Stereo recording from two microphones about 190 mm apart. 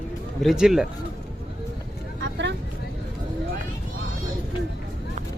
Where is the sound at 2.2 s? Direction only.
70° right (ahead or behind).